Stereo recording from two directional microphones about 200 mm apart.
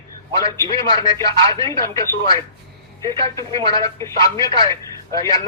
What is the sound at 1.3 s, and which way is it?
Speech, 25° right (ahead or behind).